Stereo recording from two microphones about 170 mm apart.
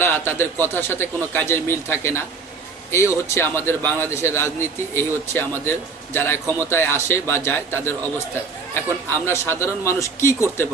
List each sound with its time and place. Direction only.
0.0 s a man's voice: 15° left (ahead or behind)